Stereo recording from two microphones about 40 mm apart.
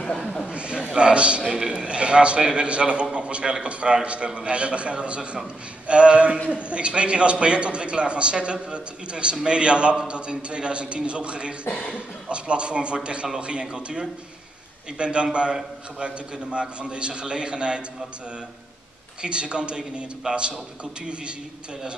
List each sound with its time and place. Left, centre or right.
0.5 s a sound: right
0.9 s a man's voice: right
1.5 s a man's voice: centre
16.5 s a man's voice: right
19.2 s a man's voice: right